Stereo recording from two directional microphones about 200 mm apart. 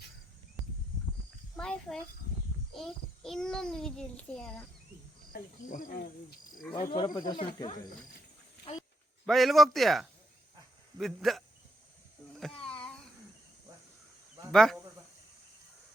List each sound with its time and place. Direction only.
1.5 s a sound: 5° left (ahead or behind)
2.7 s a child's voice: centre (ahead or behind)
5.3 s speech: 45° left (ahead or behind)
6.7 s speech: 35° left (ahead or behind)
7.0 s speech: 20° left (ahead or behind)
9.2 s a child's voice: centre (ahead or behind)
12.4 s a sound: 5° left (ahead or behind)
14.5 s a child's voice: centre (ahead or behind)